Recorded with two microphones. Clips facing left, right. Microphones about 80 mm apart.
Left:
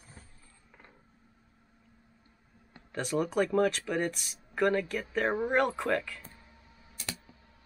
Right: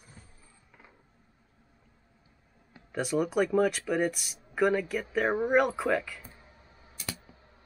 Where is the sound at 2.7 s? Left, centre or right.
Centre.